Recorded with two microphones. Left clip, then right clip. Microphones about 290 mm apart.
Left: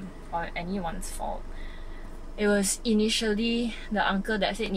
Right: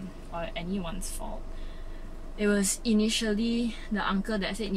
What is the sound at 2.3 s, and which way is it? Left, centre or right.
Speech, centre.